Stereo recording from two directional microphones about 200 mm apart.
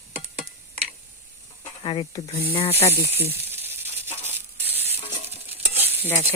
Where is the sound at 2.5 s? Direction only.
30° left (ahead or behind).